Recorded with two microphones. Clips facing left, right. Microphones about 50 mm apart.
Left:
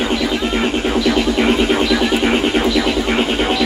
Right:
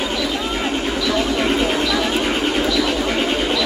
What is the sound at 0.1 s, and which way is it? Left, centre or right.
Music, left.